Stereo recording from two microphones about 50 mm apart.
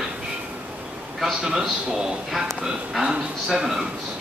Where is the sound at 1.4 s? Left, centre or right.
Centre.